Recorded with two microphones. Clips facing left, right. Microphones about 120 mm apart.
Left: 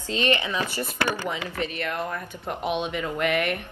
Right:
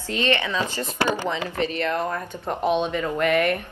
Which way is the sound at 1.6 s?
30° right (ahead or behind).